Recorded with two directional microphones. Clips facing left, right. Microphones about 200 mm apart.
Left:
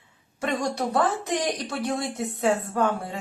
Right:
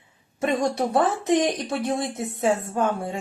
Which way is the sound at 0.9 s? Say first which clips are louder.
Right 4 dB; 25° right (ahead or behind).